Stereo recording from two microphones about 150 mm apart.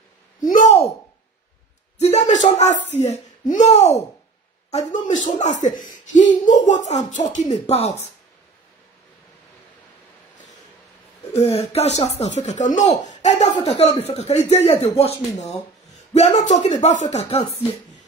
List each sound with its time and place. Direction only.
2.0 s speech: 50° left (ahead or behind)
4.9 s speech: 55° left (ahead or behind)
11.3 s speech: 45° left (ahead or behind)